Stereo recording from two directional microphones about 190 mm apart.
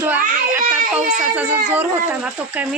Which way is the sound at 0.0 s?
10° right (ahead or behind).